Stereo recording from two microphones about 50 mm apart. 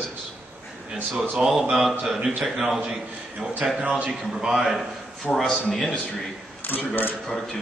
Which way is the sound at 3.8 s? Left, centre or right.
Right.